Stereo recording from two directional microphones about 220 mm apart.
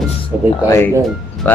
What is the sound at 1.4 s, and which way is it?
Music, 10° left (ahead or behind).